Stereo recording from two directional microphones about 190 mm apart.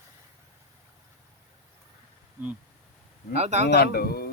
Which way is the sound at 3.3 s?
35° right (ahead or behind).